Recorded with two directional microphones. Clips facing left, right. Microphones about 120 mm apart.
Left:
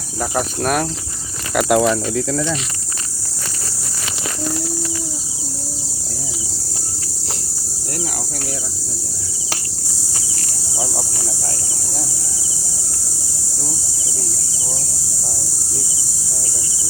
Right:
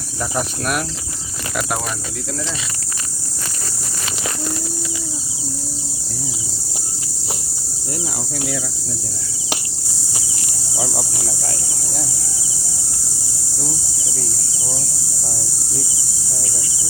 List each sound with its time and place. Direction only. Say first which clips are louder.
0.2 s cricket: left 3 dB; 40° left (ahead or behind)
1.5 s speech: left 9 dB; 65° left (ahead or behind)